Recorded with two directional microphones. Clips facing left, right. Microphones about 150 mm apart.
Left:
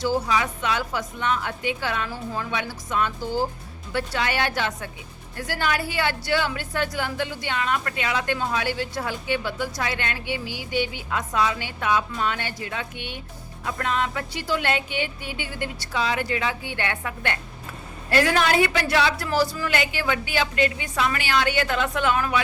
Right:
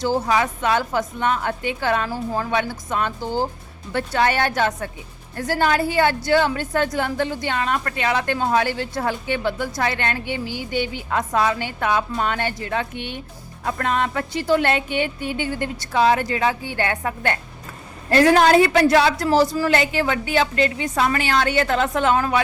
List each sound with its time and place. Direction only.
0.0 s a woman's voice: 50° right (ahead or behind)